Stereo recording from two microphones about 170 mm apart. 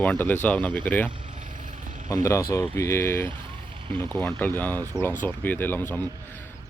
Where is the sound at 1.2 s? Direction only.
50° right (ahead or behind).